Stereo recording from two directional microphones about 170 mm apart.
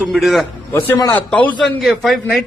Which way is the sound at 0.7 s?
15° left (ahead or behind).